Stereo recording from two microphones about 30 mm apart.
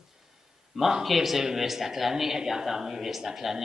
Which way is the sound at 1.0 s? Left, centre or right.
Centre.